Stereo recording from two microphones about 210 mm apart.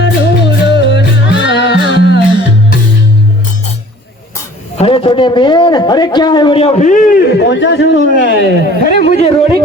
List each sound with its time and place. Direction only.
0.0 s music: 55° left (ahead or behind)
4.8 s a man's voice: 25° left (ahead or behind); by 9.1 s 45° left (ahead or behind)